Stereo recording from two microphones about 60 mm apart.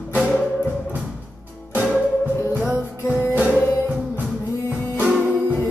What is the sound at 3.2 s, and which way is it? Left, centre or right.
Music, right.